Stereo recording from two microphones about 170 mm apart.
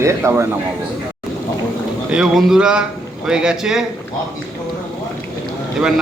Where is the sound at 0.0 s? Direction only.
15° right (ahead or behind).